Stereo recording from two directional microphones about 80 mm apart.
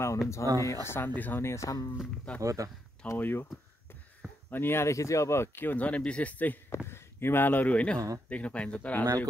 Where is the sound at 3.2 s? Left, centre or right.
Left.